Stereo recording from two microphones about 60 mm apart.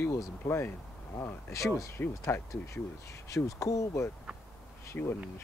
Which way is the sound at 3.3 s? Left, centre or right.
Left.